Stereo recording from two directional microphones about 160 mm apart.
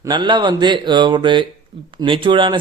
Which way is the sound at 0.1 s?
30° right (ahead or behind).